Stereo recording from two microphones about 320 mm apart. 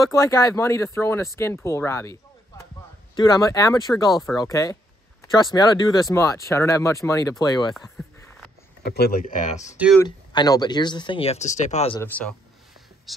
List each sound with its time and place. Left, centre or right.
0.0 s speech: centre
8.8 s speech: left
9.8 s a man's voice: centre
10.0 s speech: centre
12.0 s a man's voice: centre